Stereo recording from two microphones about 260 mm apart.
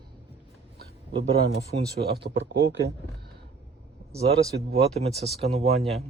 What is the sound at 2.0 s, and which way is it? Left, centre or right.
Speech, right.